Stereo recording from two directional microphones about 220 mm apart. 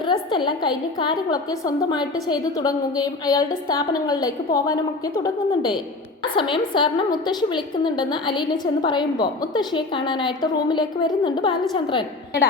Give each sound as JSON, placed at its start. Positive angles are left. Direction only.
{"t": 0.0, "sound": "a woman's voice", "side_deg": 20}